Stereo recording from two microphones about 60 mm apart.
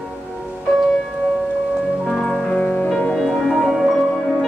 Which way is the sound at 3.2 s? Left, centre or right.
Centre.